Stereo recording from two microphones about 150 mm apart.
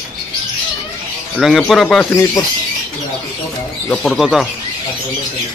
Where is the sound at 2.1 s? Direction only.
20° left (ahead or behind).